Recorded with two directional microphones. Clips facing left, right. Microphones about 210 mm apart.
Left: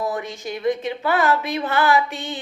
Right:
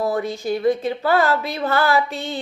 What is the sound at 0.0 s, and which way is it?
Speech, 35° right (ahead or behind).